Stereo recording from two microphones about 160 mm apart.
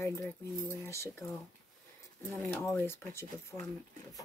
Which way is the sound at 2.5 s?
10° left (ahead or behind).